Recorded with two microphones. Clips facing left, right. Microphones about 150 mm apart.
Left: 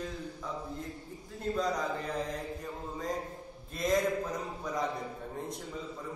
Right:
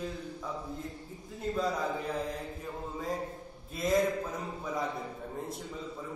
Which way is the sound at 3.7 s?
Centre (ahead or behind).